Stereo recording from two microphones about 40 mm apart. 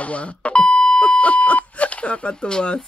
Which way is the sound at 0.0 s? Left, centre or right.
Left.